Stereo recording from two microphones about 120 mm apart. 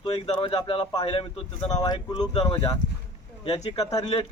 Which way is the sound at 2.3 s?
60° left (ahead or behind).